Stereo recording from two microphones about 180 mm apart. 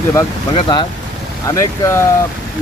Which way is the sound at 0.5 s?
25° left (ahead or behind).